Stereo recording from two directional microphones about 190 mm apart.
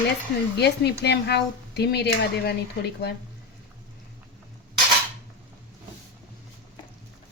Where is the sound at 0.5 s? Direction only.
60° left (ahead or behind).